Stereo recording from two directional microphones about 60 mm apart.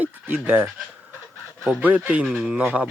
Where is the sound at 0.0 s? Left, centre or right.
Right.